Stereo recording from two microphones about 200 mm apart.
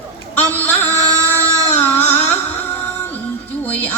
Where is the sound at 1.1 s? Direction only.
15° right (ahead or behind).